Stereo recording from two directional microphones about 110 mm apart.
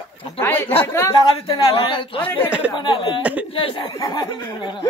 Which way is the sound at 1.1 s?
45° left (ahead or behind).